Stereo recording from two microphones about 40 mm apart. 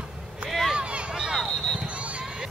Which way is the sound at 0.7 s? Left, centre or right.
Right.